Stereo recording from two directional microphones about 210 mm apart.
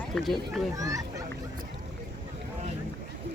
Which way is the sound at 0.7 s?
15° right (ahead or behind).